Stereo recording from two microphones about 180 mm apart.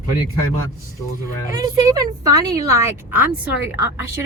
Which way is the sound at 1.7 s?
20° right (ahead or behind).